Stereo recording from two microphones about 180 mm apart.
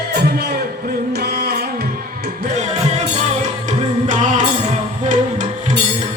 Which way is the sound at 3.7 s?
45° right (ahead or behind).